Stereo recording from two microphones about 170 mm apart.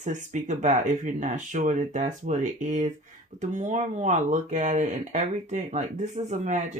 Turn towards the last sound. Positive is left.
turn(degrees=-45)  # may be behind; listen again after turning